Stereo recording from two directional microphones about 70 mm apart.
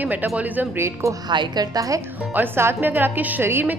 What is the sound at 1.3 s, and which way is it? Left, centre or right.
Speech, right.